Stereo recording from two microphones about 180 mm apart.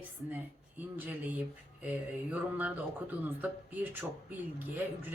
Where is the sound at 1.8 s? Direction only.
10° right (ahead or behind).